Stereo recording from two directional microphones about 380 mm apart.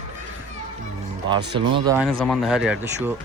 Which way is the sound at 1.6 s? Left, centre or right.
Centre.